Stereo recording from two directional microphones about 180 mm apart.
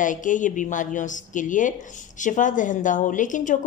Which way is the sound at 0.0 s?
45° left (ahead or behind).